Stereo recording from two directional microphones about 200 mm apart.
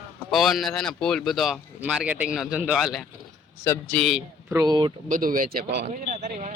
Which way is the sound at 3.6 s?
10° left (ahead or behind).